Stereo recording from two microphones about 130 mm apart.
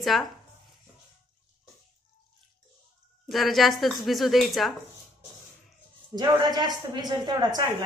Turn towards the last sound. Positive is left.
turn(degrees=-35)  # may be behind; listen again after turning